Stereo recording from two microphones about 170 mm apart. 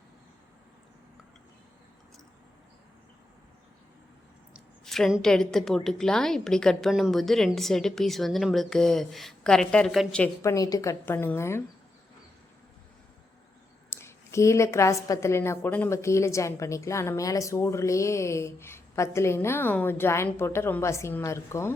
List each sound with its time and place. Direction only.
4.5 s a woman's voice: centre (ahead or behind)
10.4 s a woman's voice: 20° left (ahead or behind)
13.9 s a woman's voice: 15° left (ahead or behind)